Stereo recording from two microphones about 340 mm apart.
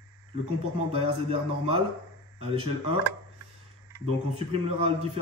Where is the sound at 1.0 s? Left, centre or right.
Centre.